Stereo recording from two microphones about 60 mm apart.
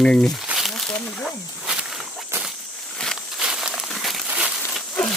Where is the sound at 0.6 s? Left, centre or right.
Centre.